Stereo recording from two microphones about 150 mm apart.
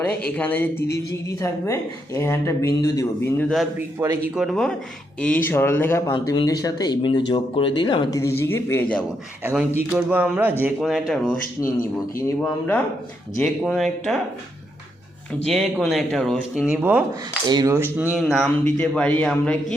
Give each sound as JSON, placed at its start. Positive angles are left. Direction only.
{"t": 0.3, "sound": "speech", "side_deg": 10}
{"t": 3.3, "sound": "speech", "side_deg": 0}
{"t": 3.8, "sound": "speech", "side_deg": -20}
{"t": 4.4, "sound": "speech", "side_deg": 0}
{"t": 5.2, "sound": "speech", "side_deg": 10}
{"t": 6.1, "sound": "speech", "side_deg": 30}
{"t": 8.4, "sound": "speech", "side_deg": 15}
{"t": 9.4, "sound": "speech", "side_deg": -10}
{"t": 12.4, "sound": "speech", "side_deg": 10}
{"t": 15.3, "sound": "speech", "side_deg": 5}
{"t": 17.4, "sound": "speech", "side_deg": -25}
{"t": 17.9, "sound": "speech", "side_deg": -10}